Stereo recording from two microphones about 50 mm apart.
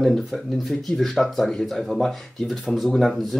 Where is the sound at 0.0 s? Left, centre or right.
Centre.